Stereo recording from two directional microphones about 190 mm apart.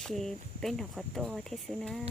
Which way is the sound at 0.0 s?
Centre (ahead or behind).